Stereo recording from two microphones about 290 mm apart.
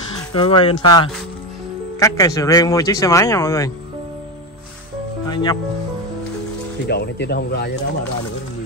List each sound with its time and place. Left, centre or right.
0.3 s speech: centre
5.3 s speech: centre
6.9 s speech: left